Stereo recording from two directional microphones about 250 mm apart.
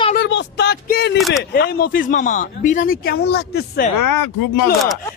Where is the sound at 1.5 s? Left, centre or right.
Left.